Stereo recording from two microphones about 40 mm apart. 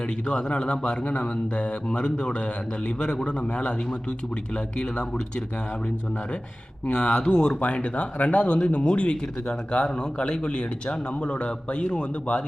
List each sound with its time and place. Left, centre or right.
0.3 s speech: left
4.8 s speech: left
6.8 s speech: left